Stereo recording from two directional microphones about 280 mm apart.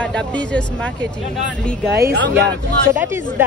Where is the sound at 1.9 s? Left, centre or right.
Right.